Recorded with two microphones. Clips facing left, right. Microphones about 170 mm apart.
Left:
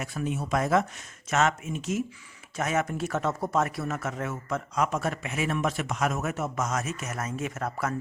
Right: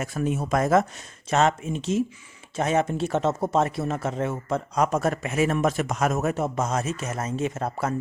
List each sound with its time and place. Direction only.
0.0 s speech: 45° right (ahead or behind)
1.3 s speech: 30° right (ahead or behind)